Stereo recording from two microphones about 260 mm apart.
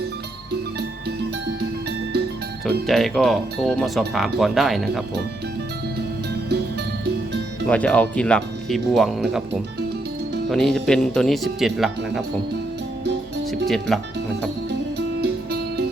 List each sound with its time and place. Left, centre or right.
2.8 s speech: centre
7.7 s speech: centre
10.5 s speech: centre
13.7 s speech: centre
15.2 s music: right